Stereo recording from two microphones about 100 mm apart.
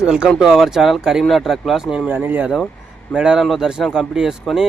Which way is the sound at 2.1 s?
20° right (ahead or behind).